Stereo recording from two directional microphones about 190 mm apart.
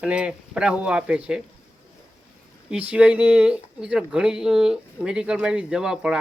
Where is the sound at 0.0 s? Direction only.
5° right (ahead or behind).